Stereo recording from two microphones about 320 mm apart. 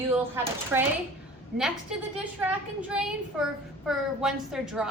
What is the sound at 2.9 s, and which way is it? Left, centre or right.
Speech, centre.